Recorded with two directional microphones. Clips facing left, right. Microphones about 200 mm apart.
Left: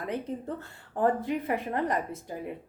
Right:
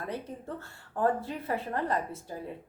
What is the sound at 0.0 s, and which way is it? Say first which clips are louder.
Speech: left 4 dB; 20° left (ahead or behind).